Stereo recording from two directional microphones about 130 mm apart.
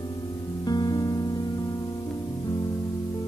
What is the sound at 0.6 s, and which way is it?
Music, 30° left (ahead or behind).